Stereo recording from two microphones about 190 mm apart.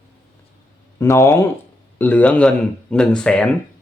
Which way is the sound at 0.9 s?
15° left (ahead or behind).